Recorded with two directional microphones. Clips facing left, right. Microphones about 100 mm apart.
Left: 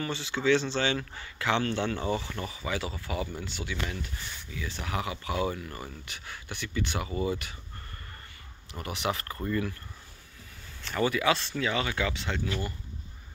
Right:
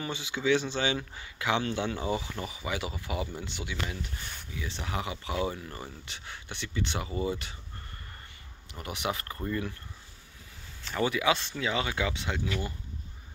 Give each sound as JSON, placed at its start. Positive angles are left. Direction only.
{"t": 0.0, "sound": "speech", "side_deg": -15}
{"t": 8.7, "sound": "speech", "side_deg": -20}
{"t": 10.9, "sound": "speech", "side_deg": -15}